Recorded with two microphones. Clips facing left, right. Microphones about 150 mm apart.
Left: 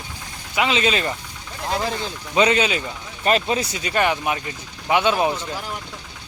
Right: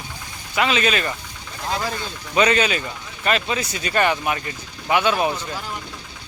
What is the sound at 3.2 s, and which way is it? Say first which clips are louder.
Speech: left 3 dB; 35° left (ahead or behind).